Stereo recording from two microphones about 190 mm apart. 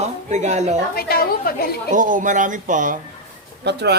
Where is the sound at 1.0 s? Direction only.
50° left (ahead or behind).